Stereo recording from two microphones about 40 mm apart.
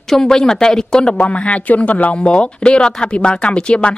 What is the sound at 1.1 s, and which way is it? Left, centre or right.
Speech, left.